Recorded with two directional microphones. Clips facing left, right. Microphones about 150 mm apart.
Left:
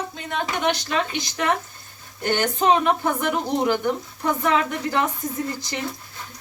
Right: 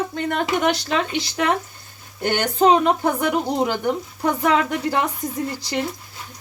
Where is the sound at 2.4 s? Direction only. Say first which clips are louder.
Right 4 dB; 35° right (ahead or behind).